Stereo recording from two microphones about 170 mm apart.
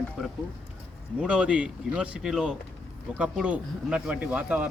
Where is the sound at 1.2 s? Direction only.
5° right (ahead or behind).